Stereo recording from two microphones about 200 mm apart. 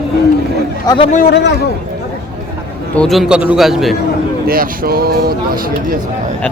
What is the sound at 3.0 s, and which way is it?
Speech, centre (ahead or behind).